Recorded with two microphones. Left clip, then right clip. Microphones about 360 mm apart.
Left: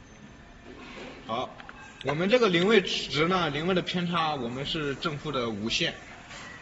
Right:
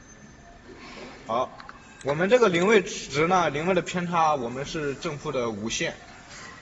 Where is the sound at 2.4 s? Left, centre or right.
Centre.